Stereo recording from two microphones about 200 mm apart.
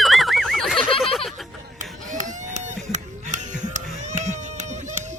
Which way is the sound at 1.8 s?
40° right (ahead or behind).